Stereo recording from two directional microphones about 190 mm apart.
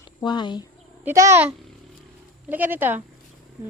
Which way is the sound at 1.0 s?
15° right (ahead or behind).